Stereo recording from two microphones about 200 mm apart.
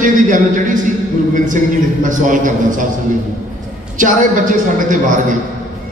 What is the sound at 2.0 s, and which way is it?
Speech, 40° right (ahead or behind).